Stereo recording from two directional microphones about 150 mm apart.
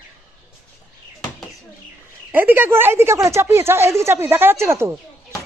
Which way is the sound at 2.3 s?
15° right (ahead or behind).